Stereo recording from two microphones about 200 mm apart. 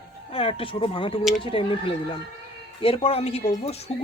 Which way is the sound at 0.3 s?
30° left (ahead or behind).